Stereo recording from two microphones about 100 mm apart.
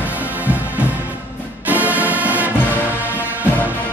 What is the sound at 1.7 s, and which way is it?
Music, 15° right (ahead or behind).